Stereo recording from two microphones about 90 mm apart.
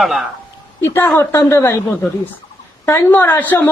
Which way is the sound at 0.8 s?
25° left (ahead or behind).